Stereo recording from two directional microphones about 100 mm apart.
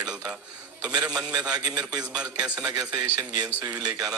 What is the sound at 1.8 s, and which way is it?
Speech, 10° right (ahead or behind).